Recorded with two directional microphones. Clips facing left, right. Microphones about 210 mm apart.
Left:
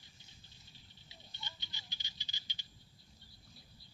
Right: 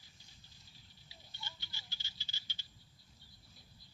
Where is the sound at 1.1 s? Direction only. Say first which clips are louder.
Even; 20° left (ahead or behind).